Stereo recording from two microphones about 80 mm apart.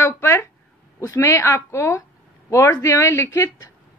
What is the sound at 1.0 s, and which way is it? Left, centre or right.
A woman's voice, left.